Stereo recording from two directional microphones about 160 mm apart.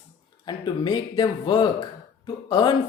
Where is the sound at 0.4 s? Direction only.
30° left (ahead or behind).